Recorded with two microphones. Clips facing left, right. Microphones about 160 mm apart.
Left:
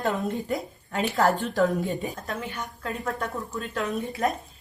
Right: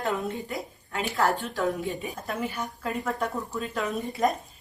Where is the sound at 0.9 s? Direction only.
40° left (ahead or behind).